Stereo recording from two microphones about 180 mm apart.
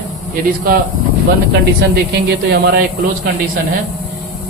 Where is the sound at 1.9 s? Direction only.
70° right (ahead or behind).